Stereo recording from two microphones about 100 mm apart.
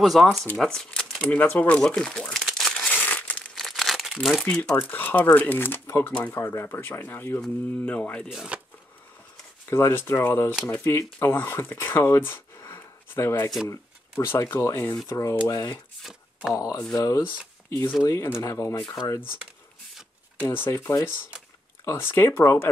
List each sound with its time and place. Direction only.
0.0 s speech: centre (ahead or behind)
2.8 s crumpling: 15° left (ahead or behind); by 4.5 s centre (ahead or behind)
4.5 s speech: 15° left (ahead or behind)
6.1 s speech: 15° left (ahead or behind)
6.4 s speech: 25° left (ahead or behind)
8.3 s speech: 5° right (ahead or behind)
9.7 s speech: 25° left (ahead or behind)
20.3 s speech: 20° left (ahead or behind)